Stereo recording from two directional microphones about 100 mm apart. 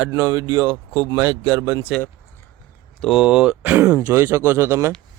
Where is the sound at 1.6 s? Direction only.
35° right (ahead or behind).